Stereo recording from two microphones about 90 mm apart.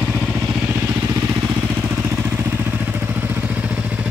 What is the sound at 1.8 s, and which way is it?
Vehicle, 25° right (ahead or behind).